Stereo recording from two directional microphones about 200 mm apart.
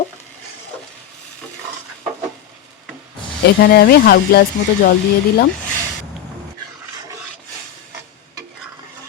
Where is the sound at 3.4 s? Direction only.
55° left (ahead or behind).